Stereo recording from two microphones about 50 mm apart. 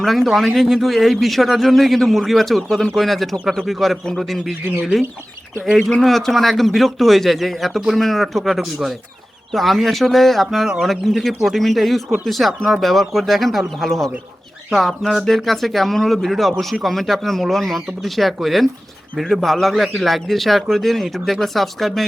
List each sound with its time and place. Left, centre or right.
0.0 s a man's voice: centre
4.6 s speech: right
5.9 s a man's voice: centre